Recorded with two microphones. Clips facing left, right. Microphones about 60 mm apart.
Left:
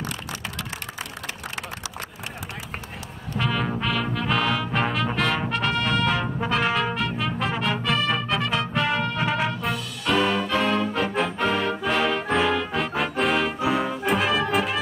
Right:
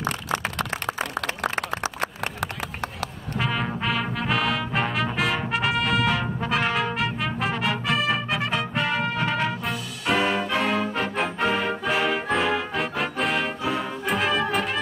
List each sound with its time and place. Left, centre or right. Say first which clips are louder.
3.3 s brass instrument: left 1 dB; centre
4.3 s music: left 1 dB; centre
13.6 s music: left 3 dB; centre
14.0 s brass instrument: right 1 dB; centre